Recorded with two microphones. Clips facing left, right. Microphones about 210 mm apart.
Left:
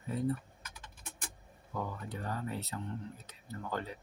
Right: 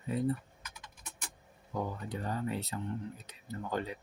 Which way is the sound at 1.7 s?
20° right (ahead or behind).